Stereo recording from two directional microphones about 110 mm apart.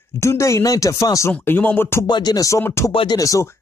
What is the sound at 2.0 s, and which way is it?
Speech, 40° left (ahead or behind).